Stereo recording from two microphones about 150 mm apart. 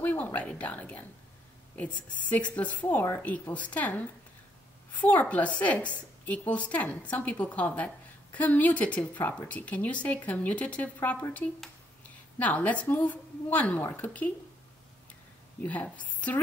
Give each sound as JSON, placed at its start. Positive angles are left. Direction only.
{"t": 0.0, "sound": "a woman's voice", "side_deg": 10}
{"t": 2.2, "sound": "a woman's voice", "side_deg": 10}
{"t": 15.6, "sound": "a woman's voice", "side_deg": 10}